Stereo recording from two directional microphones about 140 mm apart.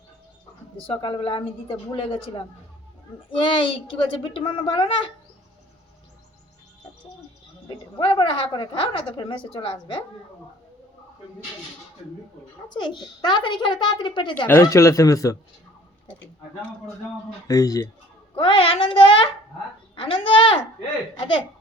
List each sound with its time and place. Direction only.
0.8 s a woman's voice: 40° left (ahead or behind)
7.9 s a woman's voice: 35° left (ahead or behind)
12.6 s a woman's voice: 35° left (ahead or behind)
14.4 s speech: 15° left (ahead or behind)
17.5 s speech: 25° left (ahead or behind)
18.3 s a woman's voice: 40° left (ahead or behind)